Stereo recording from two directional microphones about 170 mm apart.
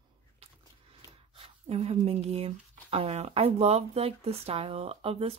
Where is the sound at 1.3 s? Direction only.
35° right (ahead or behind).